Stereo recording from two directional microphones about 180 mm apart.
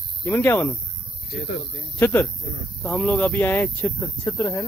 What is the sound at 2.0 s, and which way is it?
Speech, 10° left (ahead or behind).